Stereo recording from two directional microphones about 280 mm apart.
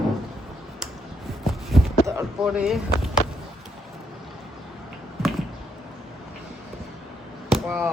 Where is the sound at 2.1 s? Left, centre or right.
Centre.